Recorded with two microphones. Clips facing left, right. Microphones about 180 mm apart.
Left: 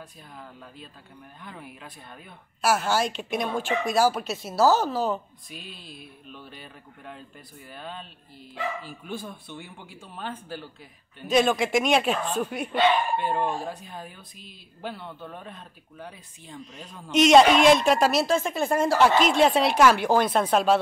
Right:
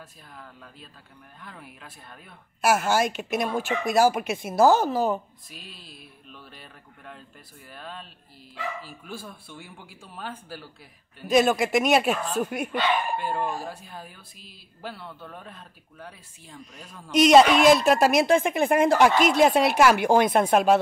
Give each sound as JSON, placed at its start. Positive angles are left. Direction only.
{"t": 0.4, "sound": "speech", "side_deg": 10}
{"t": 2.6, "sound": "speech", "side_deg": -10}
{"t": 4.4, "sound": "speech", "side_deg": -50}
{"t": 4.7, "sound": "speech", "side_deg": -10}
{"t": 5.5, "sound": "speech", "side_deg": 0}